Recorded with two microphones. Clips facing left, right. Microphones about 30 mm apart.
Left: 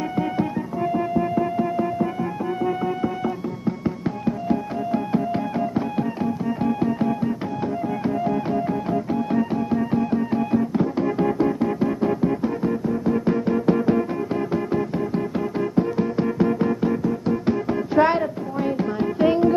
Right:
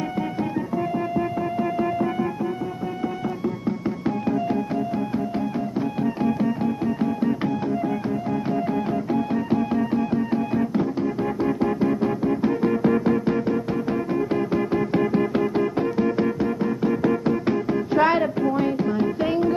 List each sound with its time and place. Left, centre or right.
0.9 s music: centre
6.4 s music: centre
8.9 s music: centre
13.5 s music: centre
14.3 s music: centre
15.1 s music: right
16.0 s music: centre